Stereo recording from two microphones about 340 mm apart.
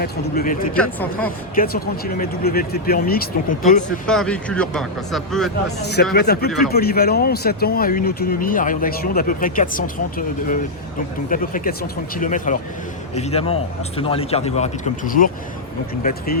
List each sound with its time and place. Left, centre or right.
0.0 s speech: left
0.7 s speech: centre
1.5 s speech: left
4.0 s speech: centre
5.8 s speech: left